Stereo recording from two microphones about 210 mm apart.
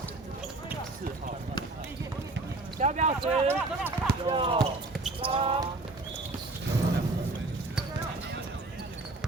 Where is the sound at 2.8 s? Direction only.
35° right (ahead or behind).